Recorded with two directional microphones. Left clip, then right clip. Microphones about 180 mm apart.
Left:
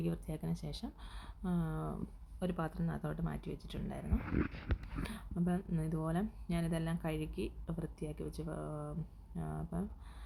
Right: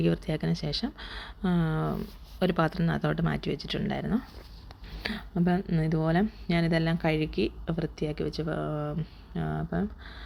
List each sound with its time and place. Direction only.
0.0 s speech: 20° right (ahead or behind)